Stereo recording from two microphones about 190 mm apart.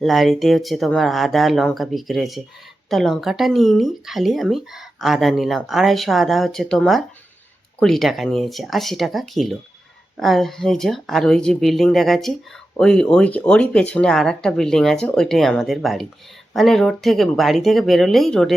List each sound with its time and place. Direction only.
0.0 s speech: centre (ahead or behind)